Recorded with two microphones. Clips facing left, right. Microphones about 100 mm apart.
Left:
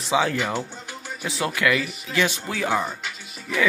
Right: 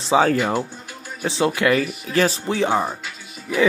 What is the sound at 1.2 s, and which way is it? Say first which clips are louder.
Speech: right 5 dB; 25° right (ahead or behind).